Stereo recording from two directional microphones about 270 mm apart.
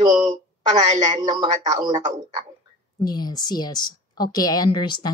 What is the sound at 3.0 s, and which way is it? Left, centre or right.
A woman's voice, centre.